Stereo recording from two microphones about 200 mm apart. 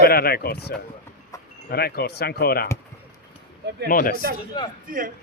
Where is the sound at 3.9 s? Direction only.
45° left (ahead or behind).